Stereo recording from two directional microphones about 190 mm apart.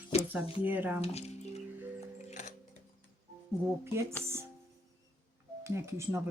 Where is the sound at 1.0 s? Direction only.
35° left (ahead or behind).